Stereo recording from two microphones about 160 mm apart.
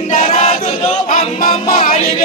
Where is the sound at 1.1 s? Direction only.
60° left (ahead or behind).